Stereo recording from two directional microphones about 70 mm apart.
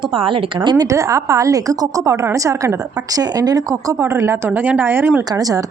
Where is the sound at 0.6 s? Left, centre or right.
Right.